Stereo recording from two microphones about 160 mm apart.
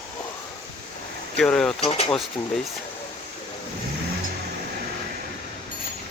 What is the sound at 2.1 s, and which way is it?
Speech, 5° left (ahead or behind).